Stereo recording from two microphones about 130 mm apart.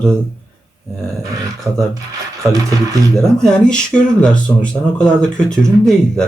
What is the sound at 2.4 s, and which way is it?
Music, 25° right (ahead or behind).